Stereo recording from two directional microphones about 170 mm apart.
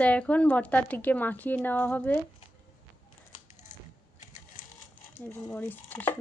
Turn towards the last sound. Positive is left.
turn(degrees=10)  # may be behind; listen again after turning